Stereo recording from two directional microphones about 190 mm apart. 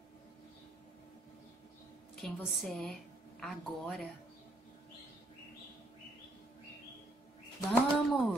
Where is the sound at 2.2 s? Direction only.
Centre (ahead or behind).